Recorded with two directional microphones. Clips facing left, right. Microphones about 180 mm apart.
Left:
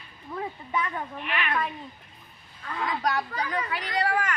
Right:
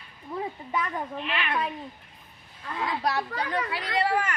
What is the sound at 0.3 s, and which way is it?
Speech, 10° right (ahead or behind).